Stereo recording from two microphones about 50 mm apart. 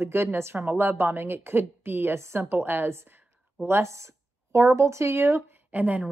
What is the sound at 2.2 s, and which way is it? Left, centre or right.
Speech, right.